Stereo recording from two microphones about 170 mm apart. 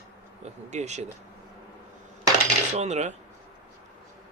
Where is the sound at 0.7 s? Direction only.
45° right (ahead or behind).